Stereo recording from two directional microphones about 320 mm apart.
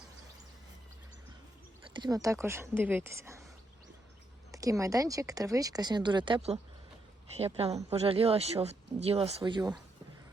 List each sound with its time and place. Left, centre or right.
2.0 s speech: centre
4.5 s speech: centre